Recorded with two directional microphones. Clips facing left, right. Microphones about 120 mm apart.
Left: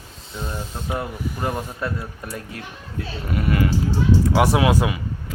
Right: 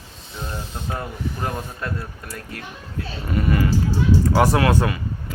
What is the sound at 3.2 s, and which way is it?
Speech, 5° left (ahead or behind).